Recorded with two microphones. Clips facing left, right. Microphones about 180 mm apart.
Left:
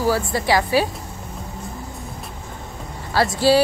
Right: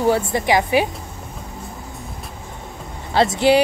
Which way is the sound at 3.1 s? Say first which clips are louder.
Right 2 dB; 20° right (ahead or behind).